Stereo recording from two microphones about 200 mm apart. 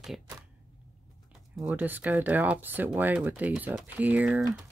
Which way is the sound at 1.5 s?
5° right (ahead or behind).